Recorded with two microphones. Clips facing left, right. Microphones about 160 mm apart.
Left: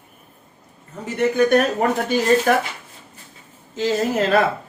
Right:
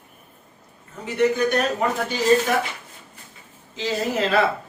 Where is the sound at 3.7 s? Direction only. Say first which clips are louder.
Left 4 dB; 45° left (ahead or behind).